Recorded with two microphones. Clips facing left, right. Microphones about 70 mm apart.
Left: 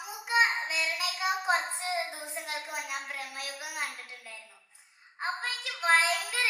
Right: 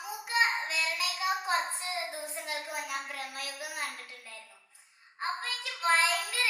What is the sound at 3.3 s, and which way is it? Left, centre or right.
Speech, left.